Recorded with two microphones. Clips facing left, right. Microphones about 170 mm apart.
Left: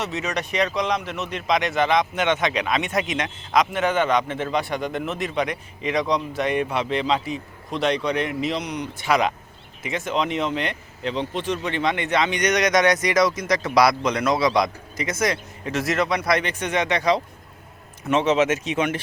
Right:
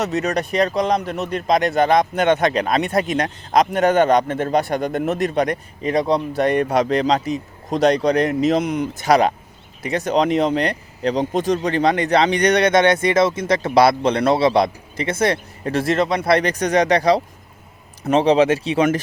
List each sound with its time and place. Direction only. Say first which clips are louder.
0.0 s a man's voice: right 6 dB; 40° right (ahead or behind)